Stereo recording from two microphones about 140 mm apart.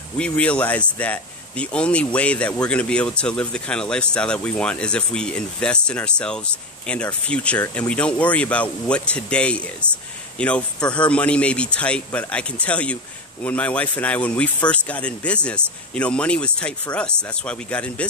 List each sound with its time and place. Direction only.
0.2 s speech: 10° left (ahead or behind)